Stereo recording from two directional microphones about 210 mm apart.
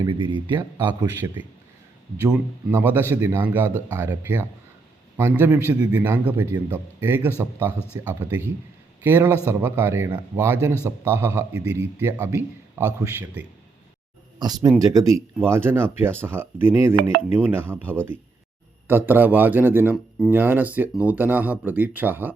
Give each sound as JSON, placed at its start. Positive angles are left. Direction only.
{"t": 0.0, "sound": "speech", "side_deg": -25}
{"t": 0.9, "sound": "a man's voice", "side_deg": -10}